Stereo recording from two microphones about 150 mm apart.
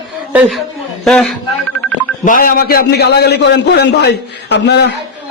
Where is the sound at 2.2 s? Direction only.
70° left (ahead or behind); by 5.0 s 90° left.